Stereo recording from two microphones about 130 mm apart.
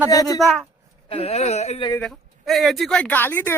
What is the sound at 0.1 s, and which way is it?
Speech, 30° left (ahead or behind).